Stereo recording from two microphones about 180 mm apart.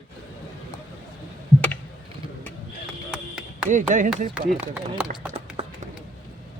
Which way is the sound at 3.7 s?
45° right (ahead or behind).